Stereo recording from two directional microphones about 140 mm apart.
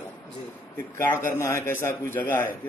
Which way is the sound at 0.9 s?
15° left (ahead or behind).